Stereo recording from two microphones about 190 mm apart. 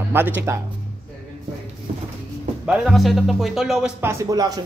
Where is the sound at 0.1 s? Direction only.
10° right (ahead or behind).